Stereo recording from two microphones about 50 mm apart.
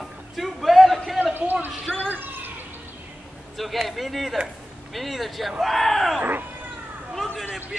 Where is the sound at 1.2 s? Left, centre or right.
Right.